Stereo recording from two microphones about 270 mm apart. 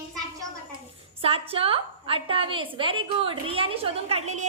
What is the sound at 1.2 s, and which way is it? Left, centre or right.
A woman's voice, right.